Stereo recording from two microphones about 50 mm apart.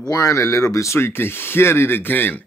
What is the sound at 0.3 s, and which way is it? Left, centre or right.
Speech, left.